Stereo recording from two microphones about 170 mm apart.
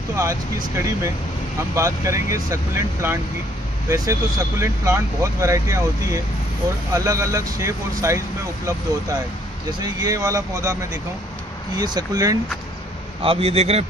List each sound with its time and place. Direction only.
0.1 s speech: 15° right (ahead or behind)
9.8 s speech: 20° right (ahead or behind)
13.2 s a man's voice: 35° right (ahead or behind)